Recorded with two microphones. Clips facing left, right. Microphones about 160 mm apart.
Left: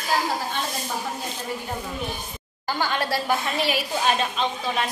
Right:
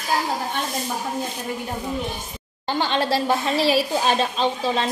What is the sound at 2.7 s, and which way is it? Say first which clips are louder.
A woman's voice: right 3 dB; 25° right (ahead or behind).